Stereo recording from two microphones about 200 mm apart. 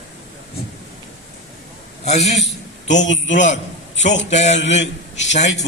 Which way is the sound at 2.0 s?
35° left (ahead or behind).